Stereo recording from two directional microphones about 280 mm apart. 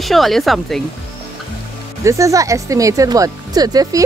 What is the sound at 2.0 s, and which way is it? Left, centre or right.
Speech, centre.